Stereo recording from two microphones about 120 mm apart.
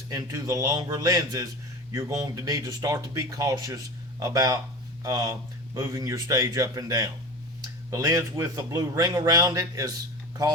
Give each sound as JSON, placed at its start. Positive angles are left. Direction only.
{"t": 0.1, "sound": "a man's voice", "side_deg": -30}